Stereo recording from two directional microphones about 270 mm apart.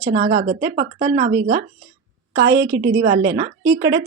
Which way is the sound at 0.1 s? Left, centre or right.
Right.